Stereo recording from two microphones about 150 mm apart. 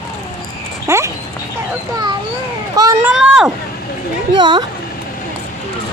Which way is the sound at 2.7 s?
25° right (ahead or behind).